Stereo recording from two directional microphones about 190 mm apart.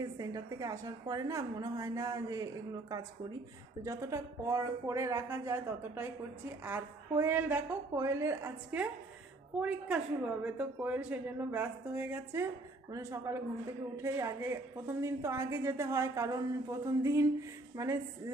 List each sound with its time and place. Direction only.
0.0 s a woman's voice: 20° right (ahead or behind)